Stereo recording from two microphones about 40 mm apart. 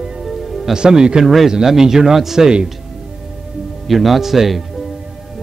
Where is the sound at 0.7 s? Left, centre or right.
Right.